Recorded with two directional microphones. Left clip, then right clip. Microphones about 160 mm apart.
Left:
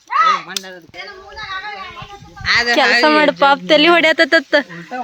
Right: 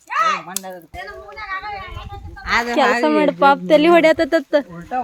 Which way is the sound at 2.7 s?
5° left (ahead or behind).